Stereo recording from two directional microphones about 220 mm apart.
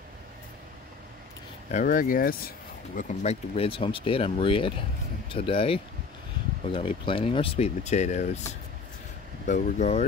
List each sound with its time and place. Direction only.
1.7 s speech: 35° left (ahead or behind)
9.5 s speech: 30° left (ahead or behind)